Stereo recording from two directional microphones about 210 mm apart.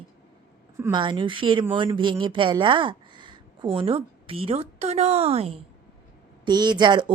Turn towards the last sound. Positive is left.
turn(degrees=-20)  # may be behind; listen again after turning